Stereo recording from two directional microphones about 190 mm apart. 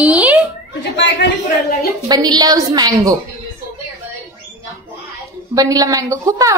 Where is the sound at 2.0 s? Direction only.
20° right (ahead or behind).